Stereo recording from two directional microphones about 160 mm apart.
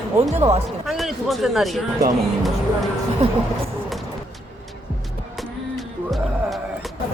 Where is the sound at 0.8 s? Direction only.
Centre (ahead or behind).